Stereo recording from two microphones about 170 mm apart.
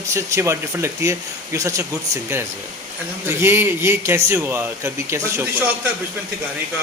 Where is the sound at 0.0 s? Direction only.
15° right (ahead or behind).